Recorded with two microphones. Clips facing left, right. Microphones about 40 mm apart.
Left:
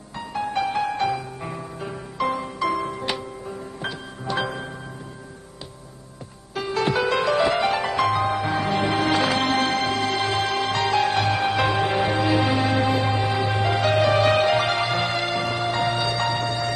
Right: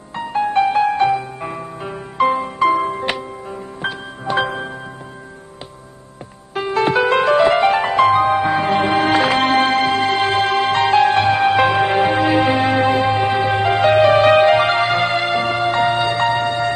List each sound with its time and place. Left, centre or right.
0.1 s music: right
6.5 s music: right